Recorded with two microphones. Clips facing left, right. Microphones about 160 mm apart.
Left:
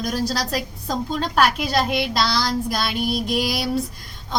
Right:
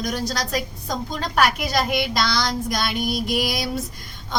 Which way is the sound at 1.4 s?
Centre (ahead or behind).